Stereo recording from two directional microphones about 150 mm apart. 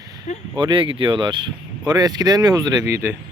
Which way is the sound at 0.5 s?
35° right (ahead or behind).